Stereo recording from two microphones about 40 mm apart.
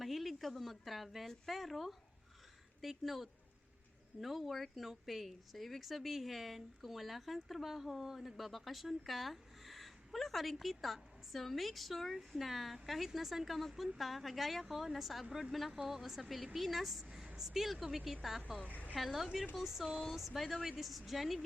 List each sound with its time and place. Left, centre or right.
0.0 s a woman's voice: centre
18.6 s a woman's voice: left
18.9 s speech: centre